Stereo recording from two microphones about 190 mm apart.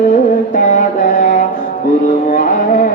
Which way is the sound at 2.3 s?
40° left (ahead or behind).